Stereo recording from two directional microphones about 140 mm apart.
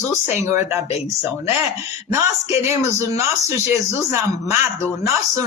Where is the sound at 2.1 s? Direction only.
20° right (ahead or behind).